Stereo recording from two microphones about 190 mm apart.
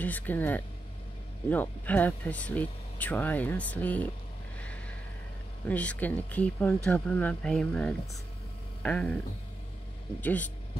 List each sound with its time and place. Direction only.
0.0 s speech: 10° left (ahead or behind)
5.7 s speech: 10° left (ahead or behind)
10.2 s speech: 10° left (ahead or behind)